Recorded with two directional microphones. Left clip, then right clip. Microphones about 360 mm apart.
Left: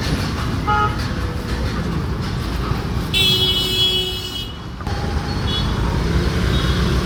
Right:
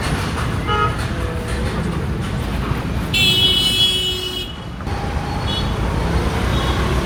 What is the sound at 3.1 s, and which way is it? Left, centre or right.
Vehicle, left.